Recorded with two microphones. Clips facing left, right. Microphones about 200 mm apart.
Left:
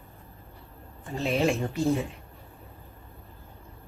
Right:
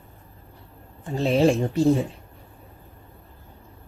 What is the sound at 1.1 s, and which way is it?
Speech, 30° right (ahead or behind).